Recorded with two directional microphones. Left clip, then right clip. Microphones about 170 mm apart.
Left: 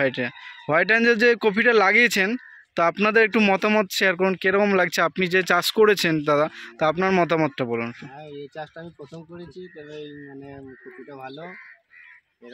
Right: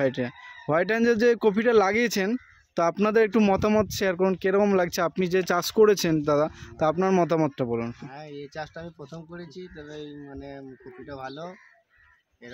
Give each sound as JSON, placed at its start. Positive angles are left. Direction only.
{"t": 0.0, "sound": "speech", "side_deg": -10}
{"t": 11.2, "sound": "speech", "side_deg": -5}